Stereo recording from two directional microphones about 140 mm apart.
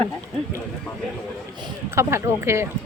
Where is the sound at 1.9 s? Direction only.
20° right (ahead or behind).